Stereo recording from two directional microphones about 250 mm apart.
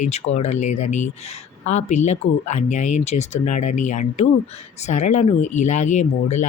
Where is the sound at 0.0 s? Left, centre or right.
Left.